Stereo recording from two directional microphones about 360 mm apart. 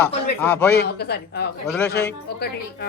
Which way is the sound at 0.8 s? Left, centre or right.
Left.